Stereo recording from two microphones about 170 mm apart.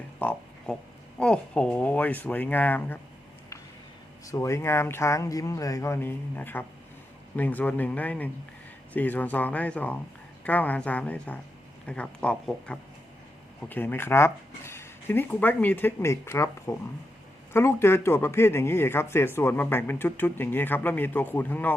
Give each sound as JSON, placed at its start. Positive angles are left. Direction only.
{"t": 0.2, "sound": "a sound", "side_deg": 10}
{"t": 1.2, "sound": "speech", "side_deg": 5}
{"t": 4.3, "sound": "speech", "side_deg": 15}